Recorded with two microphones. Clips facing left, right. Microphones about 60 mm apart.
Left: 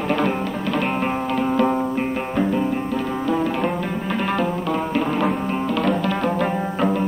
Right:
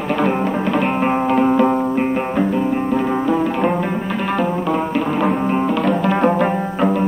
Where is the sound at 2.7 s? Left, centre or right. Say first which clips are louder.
Right 6 dB; centre.